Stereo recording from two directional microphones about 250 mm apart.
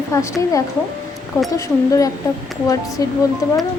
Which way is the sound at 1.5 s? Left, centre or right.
Centre.